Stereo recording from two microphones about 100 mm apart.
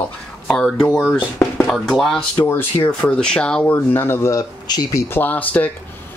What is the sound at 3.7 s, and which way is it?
Speech, 25° left (ahead or behind).